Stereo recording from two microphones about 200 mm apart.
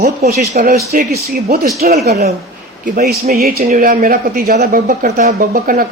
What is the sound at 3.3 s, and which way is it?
Speech, 50° right (ahead or behind).